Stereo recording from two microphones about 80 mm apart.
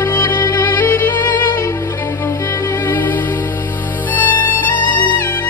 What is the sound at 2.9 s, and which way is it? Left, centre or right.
Music, left.